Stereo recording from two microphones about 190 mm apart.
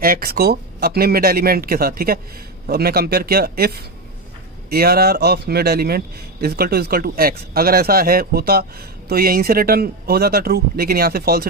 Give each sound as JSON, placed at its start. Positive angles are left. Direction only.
{"t": 0.0, "sound": "speech", "side_deg": -50}